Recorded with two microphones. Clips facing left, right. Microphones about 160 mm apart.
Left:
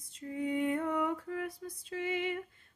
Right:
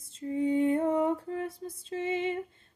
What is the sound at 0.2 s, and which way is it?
Lullaby, 25° right (ahead or behind).